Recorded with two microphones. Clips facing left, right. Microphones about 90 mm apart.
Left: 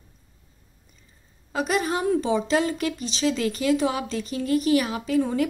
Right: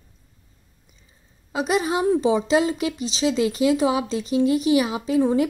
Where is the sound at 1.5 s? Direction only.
15° right (ahead or behind).